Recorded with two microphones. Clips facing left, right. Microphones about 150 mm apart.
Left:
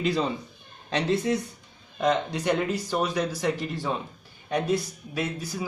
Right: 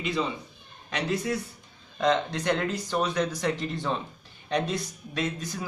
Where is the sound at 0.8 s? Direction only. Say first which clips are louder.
Left 4 dB; 30° left (ahead or behind).